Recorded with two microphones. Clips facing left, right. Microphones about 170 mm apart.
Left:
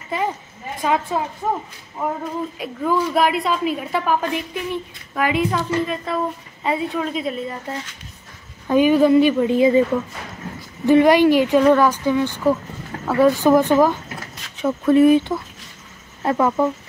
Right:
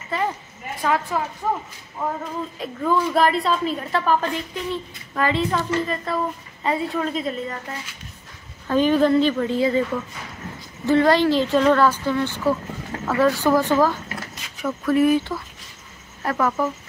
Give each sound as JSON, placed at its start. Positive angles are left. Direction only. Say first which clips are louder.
{"t": 0.8, "sound": "speech", "louder": "left 2 dB", "side_deg": 20}
{"t": 2.6, "sound": "a woman's voice", "louder": "even", "side_deg": 10}
{"t": 8.6, "sound": "a woman's voice", "louder": "left 3 dB", "side_deg": 10}
{"t": 10.9, "sound": "a woman's voice", "louder": "left 4 dB", "side_deg": 15}